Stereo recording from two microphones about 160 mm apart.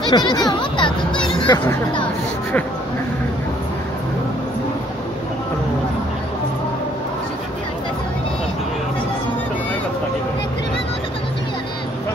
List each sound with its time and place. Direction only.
0.1 s speech: 25° left (ahead or behind)
1.2 s a sound: 30° left (ahead or behind)
1.6 s speech: 15° left (ahead or behind)